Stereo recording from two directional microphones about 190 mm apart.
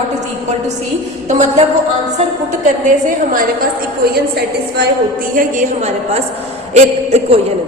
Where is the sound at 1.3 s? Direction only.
40° right (ahead or behind).